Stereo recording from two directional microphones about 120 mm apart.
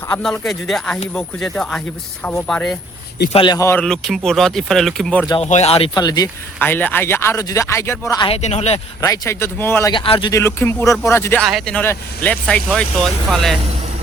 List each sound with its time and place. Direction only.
0.1 s speech: 5° left (ahead or behind)
3.3 s speech: 40° left (ahead or behind)
3.8 s speech: 5° left (ahead or behind)
5.4 s speech: 65° left (ahead or behind)
5.9 s speech: 35° left (ahead or behind)
6.6 s speech: 15° left (ahead or behind)
8.4 s speech: 65° left (ahead or behind)
9.0 s speech: 25° left (ahead or behind)
9.9 s speech: 45° left (ahead or behind)
10.3 s speech: 20° left (ahead or behind)
11.4 s speech: 5° left (ahead or behind)